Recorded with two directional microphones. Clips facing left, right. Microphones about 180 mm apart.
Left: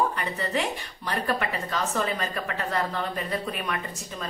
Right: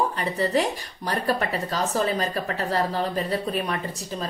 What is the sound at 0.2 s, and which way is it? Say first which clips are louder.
A woman's voice: right 5 dB; 35° right (ahead or behind).